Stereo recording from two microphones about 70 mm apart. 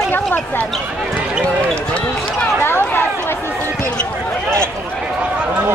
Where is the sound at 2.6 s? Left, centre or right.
Left.